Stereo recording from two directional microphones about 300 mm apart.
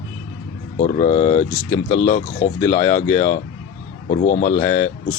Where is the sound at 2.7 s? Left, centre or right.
Centre.